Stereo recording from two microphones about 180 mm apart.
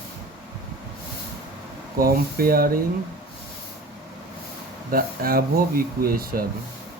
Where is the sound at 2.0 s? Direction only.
55° right (ahead or behind).